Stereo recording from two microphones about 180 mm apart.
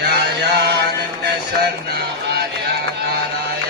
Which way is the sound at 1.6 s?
65° right (ahead or behind).